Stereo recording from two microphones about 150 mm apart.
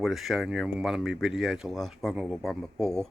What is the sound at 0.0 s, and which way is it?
Speech, centre (ahead or behind).